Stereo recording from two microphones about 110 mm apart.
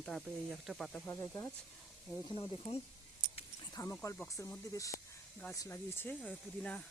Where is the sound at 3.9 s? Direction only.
25° left (ahead or behind).